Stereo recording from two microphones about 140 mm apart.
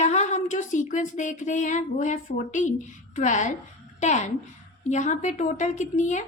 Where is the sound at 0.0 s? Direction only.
55° left (ahead or behind).